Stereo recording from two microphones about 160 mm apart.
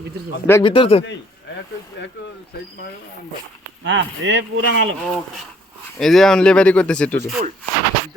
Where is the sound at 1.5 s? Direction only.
90° left.